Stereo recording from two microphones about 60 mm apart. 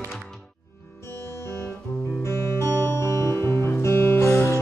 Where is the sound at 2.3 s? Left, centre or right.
Left.